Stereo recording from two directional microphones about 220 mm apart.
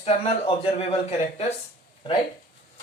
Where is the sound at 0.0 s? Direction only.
25° left (ahead or behind).